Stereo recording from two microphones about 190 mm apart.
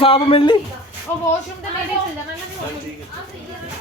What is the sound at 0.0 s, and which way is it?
Speech, 30° left (ahead or behind).